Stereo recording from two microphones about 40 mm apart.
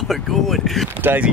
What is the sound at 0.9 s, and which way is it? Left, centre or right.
Speech, right.